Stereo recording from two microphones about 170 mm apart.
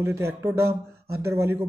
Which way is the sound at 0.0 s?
15° right (ahead or behind).